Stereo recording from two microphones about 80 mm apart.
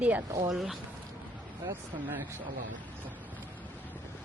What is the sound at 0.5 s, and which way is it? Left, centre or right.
Speech, centre.